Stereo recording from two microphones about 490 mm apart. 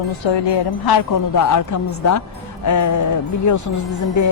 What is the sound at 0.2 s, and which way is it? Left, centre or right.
Speech, left.